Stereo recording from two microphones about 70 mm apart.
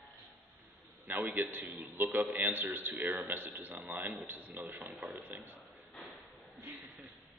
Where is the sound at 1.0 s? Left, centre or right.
Right.